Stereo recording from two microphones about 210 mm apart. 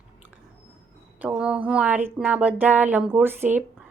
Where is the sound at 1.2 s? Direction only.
5° right (ahead or behind).